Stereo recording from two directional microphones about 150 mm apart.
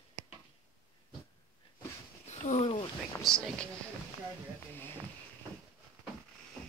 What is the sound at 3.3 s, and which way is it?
Speech, centre (ahead or behind).